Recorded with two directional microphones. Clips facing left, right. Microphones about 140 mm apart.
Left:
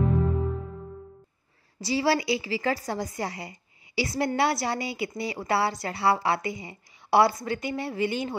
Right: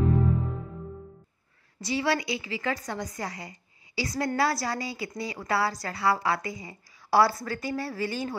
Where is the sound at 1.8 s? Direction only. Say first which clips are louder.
Left 3 dB; 30° left (ahead or behind).